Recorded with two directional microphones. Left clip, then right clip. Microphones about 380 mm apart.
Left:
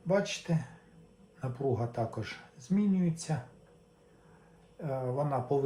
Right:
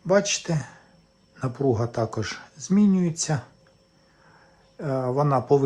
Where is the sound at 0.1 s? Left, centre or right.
Centre.